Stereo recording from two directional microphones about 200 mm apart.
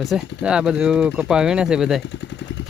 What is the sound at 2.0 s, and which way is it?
Speech, 60° left (ahead or behind).